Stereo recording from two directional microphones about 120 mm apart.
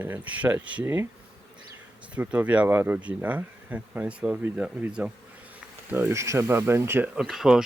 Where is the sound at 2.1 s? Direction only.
10° right (ahead or behind).